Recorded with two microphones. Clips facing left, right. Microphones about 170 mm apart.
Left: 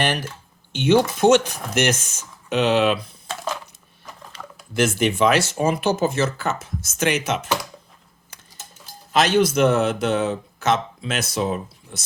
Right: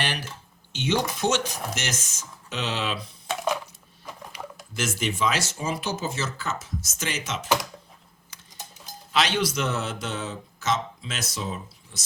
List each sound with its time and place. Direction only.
0.0 s a man's voice: 50° left (ahead or behind)
4.2 s a sound: 15° right (ahead or behind)
4.7 s a man's voice: 60° left (ahead or behind)
7.4 s speech: 10° right (ahead or behind)
9.1 s a man's voice: 45° left (ahead or behind)